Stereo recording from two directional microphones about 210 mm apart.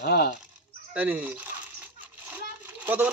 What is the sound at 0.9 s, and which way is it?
Speech, 5° right (ahead or behind).